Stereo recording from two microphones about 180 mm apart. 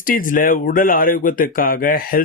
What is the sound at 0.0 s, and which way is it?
Speech, 50° left (ahead or behind).